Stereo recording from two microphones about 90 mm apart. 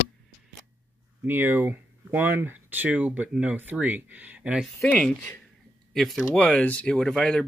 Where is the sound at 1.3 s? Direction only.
25° right (ahead or behind).